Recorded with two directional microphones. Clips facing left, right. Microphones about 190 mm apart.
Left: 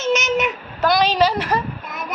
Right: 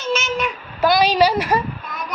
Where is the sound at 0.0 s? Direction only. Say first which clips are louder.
Left 3 dB; 20° left (ahead or behind).